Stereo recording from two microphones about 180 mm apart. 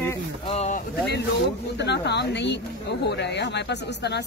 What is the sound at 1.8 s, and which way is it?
Speech, 70° left (ahead or behind).